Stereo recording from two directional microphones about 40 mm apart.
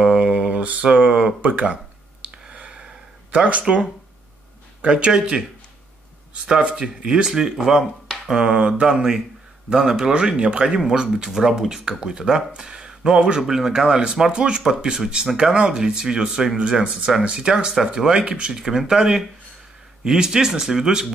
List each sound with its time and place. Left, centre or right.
0.0 s a sound: right
1.4 s speech: right
2.5 s a sound: right
3.3 s speech: right
7.1 s speech: centre
8.5 s speech: right
10.1 s speech: right
11.3 s speech: centre
18.7 s speech: centre